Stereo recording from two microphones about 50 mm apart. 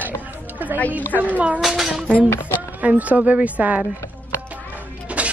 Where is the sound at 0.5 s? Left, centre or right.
Right.